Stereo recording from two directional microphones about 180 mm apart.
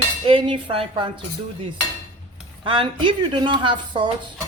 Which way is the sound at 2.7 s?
25° right (ahead or behind).